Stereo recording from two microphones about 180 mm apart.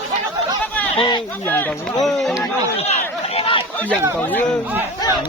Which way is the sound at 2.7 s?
35° left (ahead or behind).